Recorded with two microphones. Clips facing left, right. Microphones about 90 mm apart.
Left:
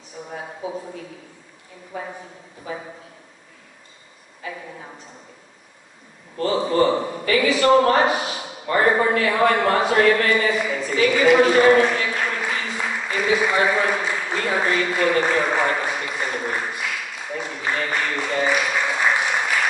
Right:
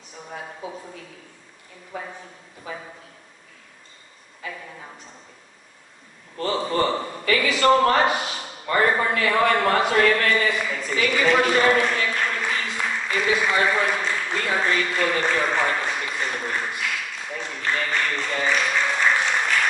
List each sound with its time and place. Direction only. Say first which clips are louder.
6.4 s a man's voice: left 4 dB; 15° left (ahead or behind)